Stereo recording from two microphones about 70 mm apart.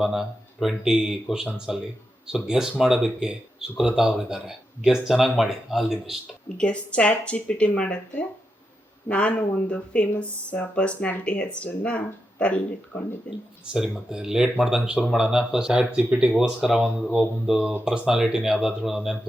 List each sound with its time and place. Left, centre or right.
0.0 s speech: centre
6.2 s speech: centre
14.1 s speech: centre